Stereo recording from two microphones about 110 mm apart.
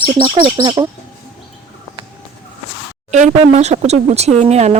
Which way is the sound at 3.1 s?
90° right.